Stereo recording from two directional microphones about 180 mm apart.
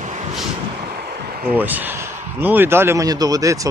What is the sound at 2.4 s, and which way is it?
Speech, 10° right (ahead or behind).